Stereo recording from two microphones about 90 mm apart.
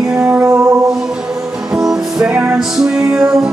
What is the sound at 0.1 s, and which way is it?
Music, 20° right (ahead or behind).